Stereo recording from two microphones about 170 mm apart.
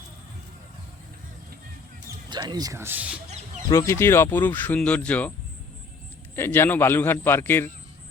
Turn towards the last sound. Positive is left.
turn(degrees=15)  # may be behind; listen again after turning